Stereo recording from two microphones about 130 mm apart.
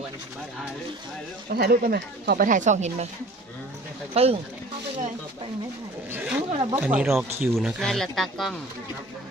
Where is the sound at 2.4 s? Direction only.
75° right (ahead or behind).